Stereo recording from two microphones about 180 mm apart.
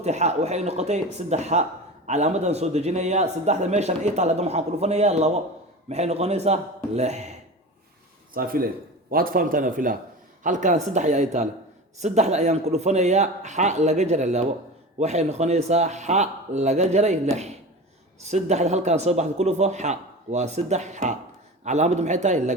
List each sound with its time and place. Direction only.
0.0 s a man's voice: 40° right (ahead or behind)
8.3 s a man's voice: 55° right (ahead or behind)